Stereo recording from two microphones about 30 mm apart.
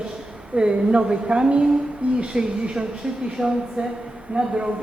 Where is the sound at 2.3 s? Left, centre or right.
Right.